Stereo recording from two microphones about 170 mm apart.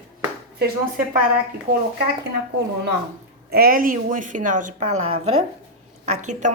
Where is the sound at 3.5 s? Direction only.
60° right (ahead or behind).